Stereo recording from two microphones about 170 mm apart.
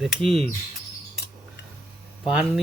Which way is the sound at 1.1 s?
70° left (ahead or behind).